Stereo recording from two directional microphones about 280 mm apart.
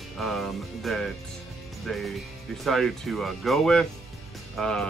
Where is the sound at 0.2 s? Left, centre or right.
Centre.